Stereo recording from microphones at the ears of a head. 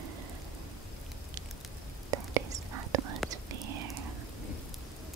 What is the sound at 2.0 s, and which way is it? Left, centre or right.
Whispering, right.